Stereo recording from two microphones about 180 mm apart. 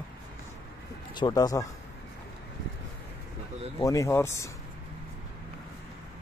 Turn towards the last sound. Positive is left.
turn(degrees=15)  # may be behind; listen again after turning